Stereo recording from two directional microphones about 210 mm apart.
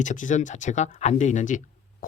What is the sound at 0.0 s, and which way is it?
Speech, 35° left (ahead or behind).